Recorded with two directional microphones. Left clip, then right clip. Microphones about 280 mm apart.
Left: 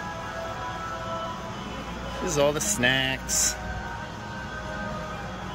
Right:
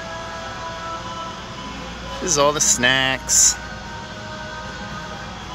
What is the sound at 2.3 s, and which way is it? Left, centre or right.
Speech, centre.